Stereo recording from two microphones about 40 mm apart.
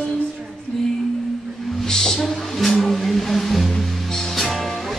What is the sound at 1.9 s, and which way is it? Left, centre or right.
Music, centre.